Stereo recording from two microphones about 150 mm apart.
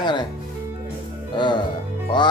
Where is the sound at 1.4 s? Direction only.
30° left (ahead or behind).